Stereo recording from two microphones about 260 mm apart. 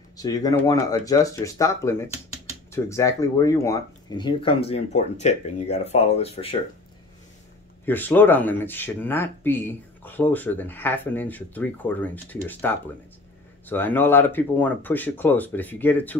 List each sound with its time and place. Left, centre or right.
0.2 s speech: centre
7.8 s speech: centre